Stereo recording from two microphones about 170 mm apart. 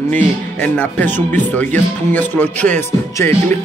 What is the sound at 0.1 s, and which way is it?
Speech, 10° left (ahead or behind).